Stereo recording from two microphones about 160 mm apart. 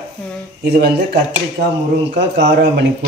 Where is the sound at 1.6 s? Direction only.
80° right.